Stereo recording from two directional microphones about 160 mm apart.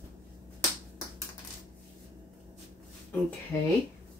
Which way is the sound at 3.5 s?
15° left (ahead or behind).